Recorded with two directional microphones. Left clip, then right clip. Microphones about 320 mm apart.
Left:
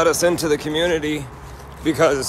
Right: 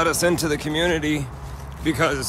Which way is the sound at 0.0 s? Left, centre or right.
Centre.